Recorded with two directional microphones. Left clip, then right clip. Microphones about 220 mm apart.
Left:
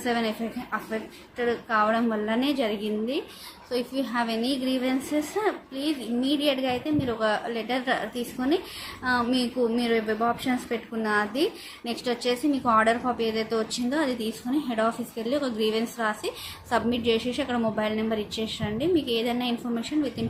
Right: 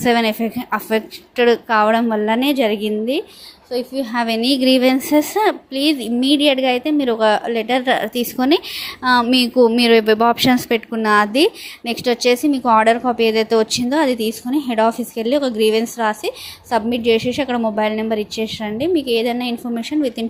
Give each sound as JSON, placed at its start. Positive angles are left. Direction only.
{"t": 0.0, "sound": "a woman's voice", "side_deg": -30}